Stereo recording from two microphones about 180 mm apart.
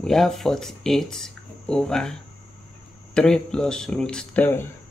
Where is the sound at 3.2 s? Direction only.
5° left (ahead or behind).